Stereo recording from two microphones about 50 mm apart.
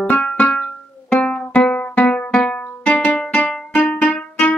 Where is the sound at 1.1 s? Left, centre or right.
Left.